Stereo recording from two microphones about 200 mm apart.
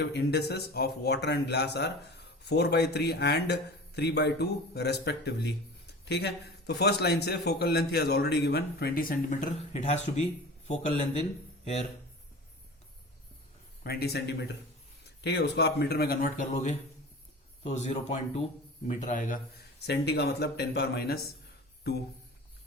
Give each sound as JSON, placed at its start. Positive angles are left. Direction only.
{"t": 0.0, "sound": "a man's voice", "side_deg": 55}
{"t": 13.8, "sound": "a man's voice", "side_deg": 50}
{"t": 19.8, "sound": "a man's voice", "side_deg": 55}